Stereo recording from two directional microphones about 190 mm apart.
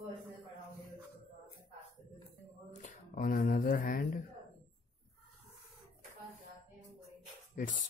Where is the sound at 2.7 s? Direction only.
40° left (ahead or behind).